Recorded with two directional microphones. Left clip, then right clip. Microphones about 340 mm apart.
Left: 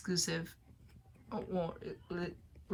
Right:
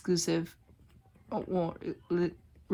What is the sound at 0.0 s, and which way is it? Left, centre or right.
Speech, centre.